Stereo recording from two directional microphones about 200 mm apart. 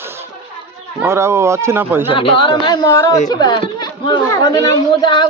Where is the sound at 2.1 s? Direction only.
25° left (ahead or behind).